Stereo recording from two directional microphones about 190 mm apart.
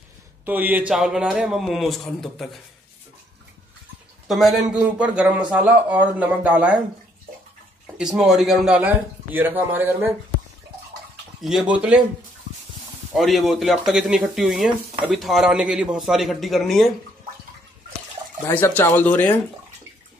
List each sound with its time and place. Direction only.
0.5 s speech: 10° right (ahead or behind)
4.3 s a man's voice: centre (ahead or behind)
7.8 s a man's voice: 5° right (ahead or behind)
11.4 s a man's voice: 5° right (ahead or behind)
13.1 s speech: centre (ahead or behind)
18.5 s speech: 10° left (ahead or behind)